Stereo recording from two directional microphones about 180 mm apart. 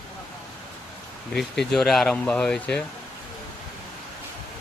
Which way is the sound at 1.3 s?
Centre (ahead or behind).